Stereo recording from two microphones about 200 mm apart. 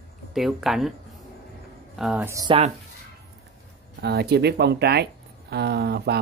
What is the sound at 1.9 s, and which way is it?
Speech, 5° right (ahead or behind).